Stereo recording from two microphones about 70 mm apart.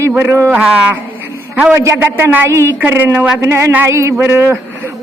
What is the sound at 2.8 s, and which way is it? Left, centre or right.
Speech, right.